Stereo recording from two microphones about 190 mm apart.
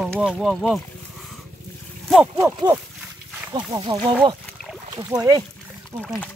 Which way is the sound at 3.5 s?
20° right (ahead or behind).